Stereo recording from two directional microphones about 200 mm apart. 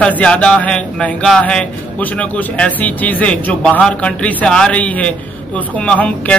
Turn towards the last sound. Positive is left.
turn(degrees=5)  # may be behind; listen again after turning